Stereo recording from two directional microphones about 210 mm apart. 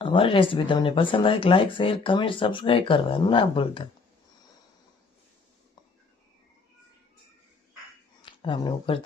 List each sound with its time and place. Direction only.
0.0 s speech: 25° left (ahead or behind)
8.2 s speech: 25° left (ahead or behind)